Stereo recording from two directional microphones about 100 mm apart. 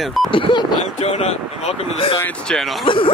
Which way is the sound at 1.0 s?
90° left.